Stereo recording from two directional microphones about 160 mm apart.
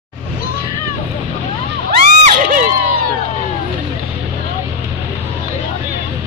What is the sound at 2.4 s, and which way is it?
Crowd, 60° right (ahead or behind).